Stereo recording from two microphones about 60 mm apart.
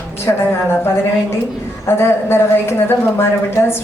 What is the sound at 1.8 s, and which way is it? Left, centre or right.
A woman's voice, left.